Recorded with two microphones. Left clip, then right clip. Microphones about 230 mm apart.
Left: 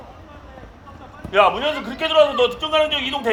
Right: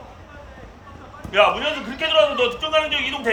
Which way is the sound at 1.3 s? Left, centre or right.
Left.